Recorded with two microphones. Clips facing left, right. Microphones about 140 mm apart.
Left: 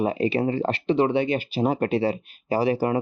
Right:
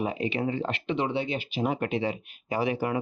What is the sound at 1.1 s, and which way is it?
Speech, 55° left (ahead or behind).